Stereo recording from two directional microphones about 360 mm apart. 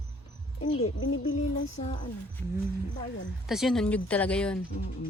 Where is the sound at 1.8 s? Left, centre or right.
Centre.